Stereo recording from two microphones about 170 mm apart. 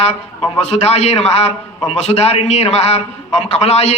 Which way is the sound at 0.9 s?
40° left (ahead or behind).